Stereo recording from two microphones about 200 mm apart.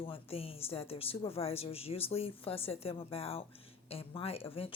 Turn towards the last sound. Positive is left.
turn(degrees=30)  # may be behind; listen again after turning